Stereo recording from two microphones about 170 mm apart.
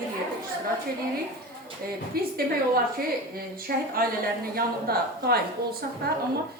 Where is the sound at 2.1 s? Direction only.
60° right (ahead or behind).